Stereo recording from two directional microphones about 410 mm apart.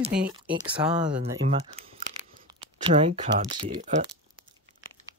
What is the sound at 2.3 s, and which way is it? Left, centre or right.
Speech, centre.